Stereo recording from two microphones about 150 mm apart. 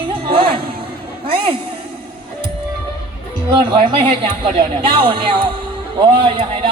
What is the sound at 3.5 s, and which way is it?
A woman's voice, 30° right (ahead or behind).